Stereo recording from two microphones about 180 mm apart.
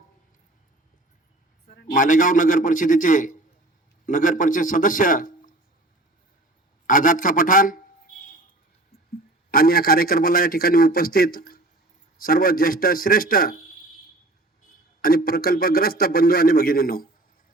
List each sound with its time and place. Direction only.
1.6 s a man's voice: 50° left (ahead or behind)
6.8 s a man's voice: 50° left (ahead or behind)
9.5 s a man's voice: 55° left (ahead or behind)
15.0 s a man's voice: 55° left (ahead or behind)